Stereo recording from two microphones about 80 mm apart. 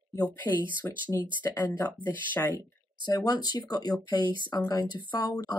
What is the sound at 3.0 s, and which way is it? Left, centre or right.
Speech, left.